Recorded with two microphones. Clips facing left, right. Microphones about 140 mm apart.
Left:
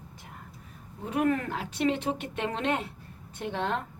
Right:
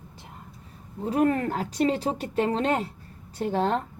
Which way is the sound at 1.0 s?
35° right (ahead or behind).